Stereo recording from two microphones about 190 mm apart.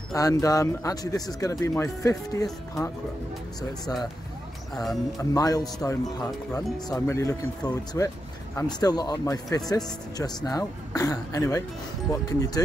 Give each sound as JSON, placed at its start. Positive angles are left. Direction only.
{"t": 0.1, "sound": "speech", "side_deg": 20}
{"t": 5.3, "sound": "speech", "side_deg": 20}